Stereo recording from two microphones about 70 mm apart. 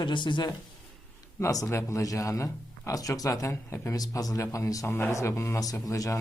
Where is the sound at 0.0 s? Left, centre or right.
Left.